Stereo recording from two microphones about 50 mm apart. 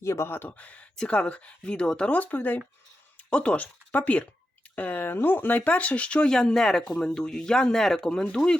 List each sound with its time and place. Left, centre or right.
0.0 s speech: left
0.6 s speech: left
3.2 s speech: left
6.3 s speech: centre
8.4 s speech: centre